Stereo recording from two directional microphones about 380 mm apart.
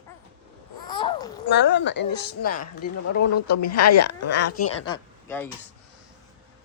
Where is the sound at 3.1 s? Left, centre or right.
Left.